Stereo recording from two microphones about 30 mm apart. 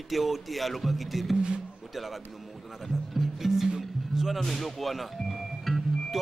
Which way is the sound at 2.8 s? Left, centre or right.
Centre.